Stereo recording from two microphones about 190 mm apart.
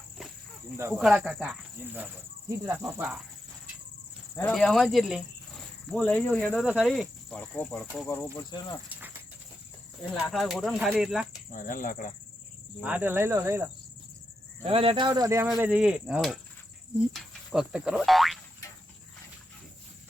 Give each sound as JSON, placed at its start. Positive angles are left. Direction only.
{"t": 0.9, "sound": "speech", "side_deg": 0}
{"t": 4.4, "sound": "speech", "side_deg": 5}
{"t": 8.9, "sound": "cricket", "side_deg": -10}
{"t": 10.2, "sound": "speech", "side_deg": 0}
{"t": 11.5, "sound": "speech", "side_deg": 45}
{"t": 12.8, "sound": "speech", "side_deg": -10}
{"t": 14.6, "sound": "speech", "side_deg": -30}
{"t": 15.4, "sound": "speech", "side_deg": -5}